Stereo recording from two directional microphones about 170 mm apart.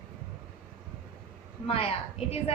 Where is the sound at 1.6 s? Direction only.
35° left (ahead or behind).